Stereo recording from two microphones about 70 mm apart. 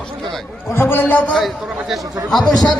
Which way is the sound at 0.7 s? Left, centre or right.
Left.